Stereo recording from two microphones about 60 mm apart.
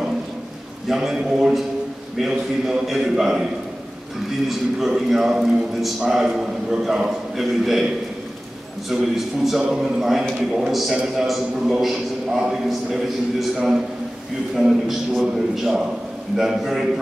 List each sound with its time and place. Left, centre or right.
0.8 s a man's voice: centre
4.5 s a man's voice: centre